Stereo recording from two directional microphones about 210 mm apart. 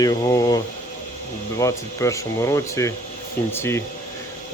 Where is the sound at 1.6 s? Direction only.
15° left (ahead or behind).